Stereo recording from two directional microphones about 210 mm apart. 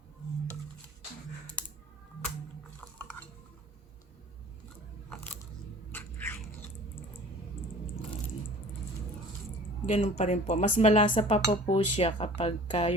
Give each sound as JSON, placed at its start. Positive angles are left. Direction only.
{"t": 5.0, "sound": "crunch", "side_deg": 5}
{"t": 5.9, "sound": "a sound", "side_deg": 10}
{"t": 9.8, "sound": "speech", "side_deg": 30}